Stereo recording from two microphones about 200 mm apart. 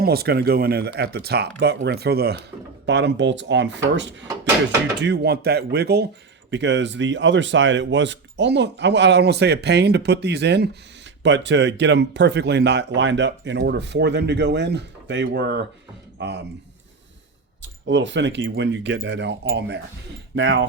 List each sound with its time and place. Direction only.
0.0 s speech: 50° right (ahead or behind)
2.8 s speech: 65° right (ahead or behind)
6.5 s speech: 65° right (ahead or behind)
17.6 s speech: 65° right (ahead or behind)